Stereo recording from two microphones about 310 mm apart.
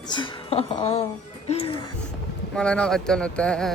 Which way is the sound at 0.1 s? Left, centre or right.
Centre.